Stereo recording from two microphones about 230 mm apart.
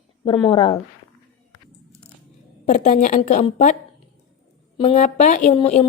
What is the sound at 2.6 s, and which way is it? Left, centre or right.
A woman's voice, left.